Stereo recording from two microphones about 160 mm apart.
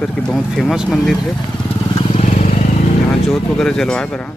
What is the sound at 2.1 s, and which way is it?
Vehicle, 45° left (ahead or behind).